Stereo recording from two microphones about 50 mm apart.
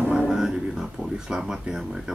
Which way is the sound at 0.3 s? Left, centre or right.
Centre.